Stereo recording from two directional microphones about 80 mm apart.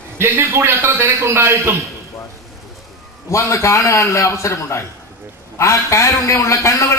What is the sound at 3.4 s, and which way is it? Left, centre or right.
A man's voice, left.